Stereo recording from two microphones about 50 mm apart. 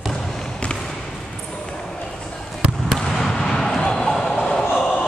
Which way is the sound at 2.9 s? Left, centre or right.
Centre.